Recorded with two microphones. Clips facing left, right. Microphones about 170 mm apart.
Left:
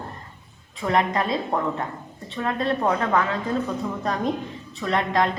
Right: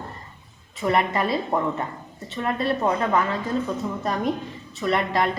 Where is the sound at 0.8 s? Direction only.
5° right (ahead or behind).